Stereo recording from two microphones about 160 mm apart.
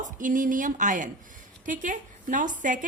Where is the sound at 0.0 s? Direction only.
55° right (ahead or behind).